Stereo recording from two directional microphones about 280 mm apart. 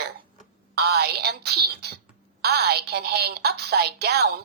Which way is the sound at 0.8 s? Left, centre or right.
Right.